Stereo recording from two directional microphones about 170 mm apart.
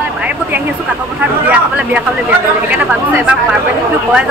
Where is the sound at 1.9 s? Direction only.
10° right (ahead or behind).